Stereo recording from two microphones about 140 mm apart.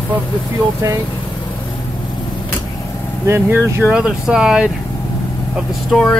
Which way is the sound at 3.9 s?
5° right (ahead or behind).